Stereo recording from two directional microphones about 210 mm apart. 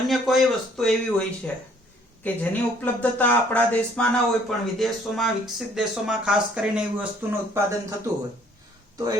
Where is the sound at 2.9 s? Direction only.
5° left (ahead or behind).